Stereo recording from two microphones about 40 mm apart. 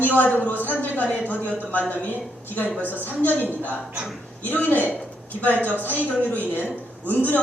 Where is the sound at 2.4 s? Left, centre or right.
Left.